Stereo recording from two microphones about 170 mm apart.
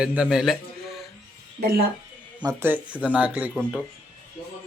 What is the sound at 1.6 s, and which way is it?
Speech, 60° right (ahead or behind).